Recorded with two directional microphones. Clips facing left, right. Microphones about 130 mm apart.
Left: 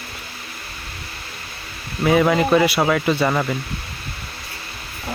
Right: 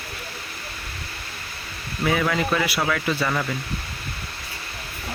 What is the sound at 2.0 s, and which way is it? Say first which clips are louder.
Speech: left 6 dB; 30° left (ahead or behind).